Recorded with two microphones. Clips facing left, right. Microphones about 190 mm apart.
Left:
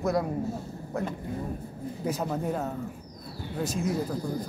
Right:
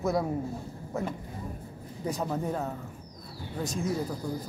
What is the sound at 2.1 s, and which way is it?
Speech, 5° left (ahead or behind).